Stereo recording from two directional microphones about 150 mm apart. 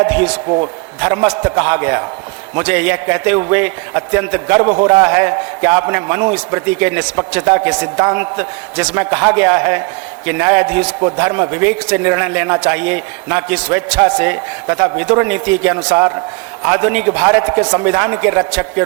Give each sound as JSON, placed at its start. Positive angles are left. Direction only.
{"t": 0.0, "sound": "a man's voice", "side_deg": -10}
{"t": 0.4, "sound": "a man's voice", "side_deg": -40}
{"t": 1.0, "sound": "a man's voice", "side_deg": -10}